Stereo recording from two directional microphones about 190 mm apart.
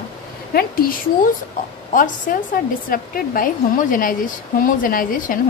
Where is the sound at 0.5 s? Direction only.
50° left (ahead or behind).